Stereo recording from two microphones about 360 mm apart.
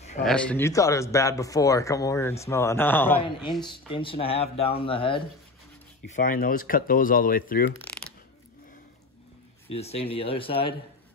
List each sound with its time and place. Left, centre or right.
0.2 s speech: centre; by 7.7 s left
7.7 s mechanisms: centre
9.7 s speech: centre